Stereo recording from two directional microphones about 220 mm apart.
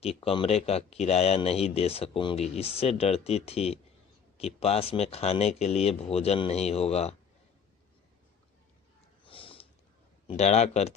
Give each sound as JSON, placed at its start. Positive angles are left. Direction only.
{"t": 0.0, "sound": "speech", "side_deg": 25}
{"t": 9.2, "sound": "sniff", "side_deg": 25}
{"t": 10.2, "sound": "speech", "side_deg": 30}